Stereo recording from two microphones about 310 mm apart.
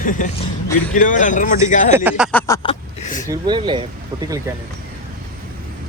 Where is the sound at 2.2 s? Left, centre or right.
Centre.